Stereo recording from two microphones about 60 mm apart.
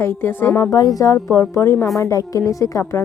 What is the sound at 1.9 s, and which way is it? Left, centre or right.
Speech, left.